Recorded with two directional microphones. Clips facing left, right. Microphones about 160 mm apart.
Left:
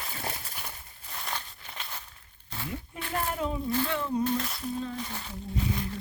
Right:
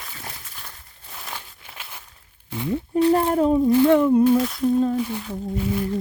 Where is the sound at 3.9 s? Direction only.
65° right (ahead or behind).